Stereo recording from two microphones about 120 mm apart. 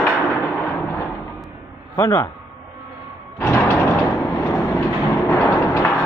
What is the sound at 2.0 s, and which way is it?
Speech, 25° left (ahead or behind).